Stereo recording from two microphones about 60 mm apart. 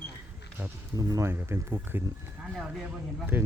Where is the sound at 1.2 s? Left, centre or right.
Right.